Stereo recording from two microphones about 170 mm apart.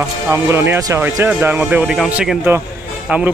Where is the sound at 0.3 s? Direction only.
15° right (ahead or behind).